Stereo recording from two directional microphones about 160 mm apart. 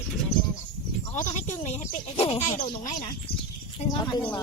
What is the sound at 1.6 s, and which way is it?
Speech, 40° left (ahead or behind).